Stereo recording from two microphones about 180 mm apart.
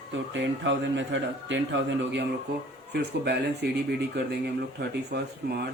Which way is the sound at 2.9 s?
65° right (ahead or behind).